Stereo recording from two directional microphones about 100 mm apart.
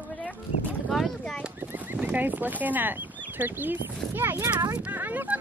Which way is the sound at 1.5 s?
20° right (ahead or behind).